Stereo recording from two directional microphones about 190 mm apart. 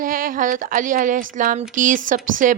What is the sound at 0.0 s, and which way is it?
A woman's voice, 45° right (ahead or behind).